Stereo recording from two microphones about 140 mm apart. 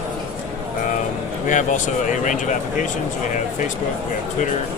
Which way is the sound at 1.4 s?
65° left (ahead or behind).